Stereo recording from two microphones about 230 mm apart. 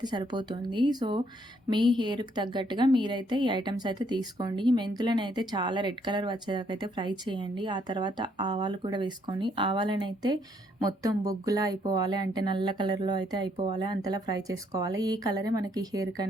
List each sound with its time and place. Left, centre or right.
0.0 s a woman's voice: centre